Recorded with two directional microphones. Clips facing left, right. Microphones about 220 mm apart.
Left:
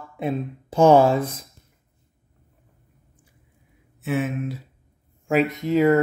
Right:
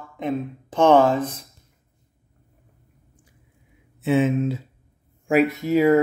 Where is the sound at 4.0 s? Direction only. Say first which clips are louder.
Right 6 dB; 25° right (ahead or behind).